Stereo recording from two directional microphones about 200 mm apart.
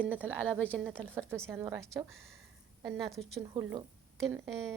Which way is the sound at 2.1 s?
Centre (ahead or behind).